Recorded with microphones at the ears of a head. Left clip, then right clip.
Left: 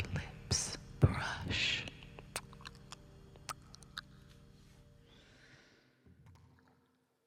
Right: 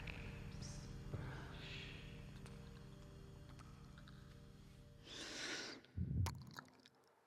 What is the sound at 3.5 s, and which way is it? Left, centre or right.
Music, left.